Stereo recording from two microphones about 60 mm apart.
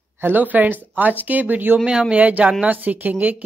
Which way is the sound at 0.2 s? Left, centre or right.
Right.